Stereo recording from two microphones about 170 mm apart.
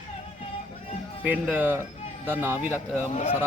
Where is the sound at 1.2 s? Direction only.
10° right (ahead or behind).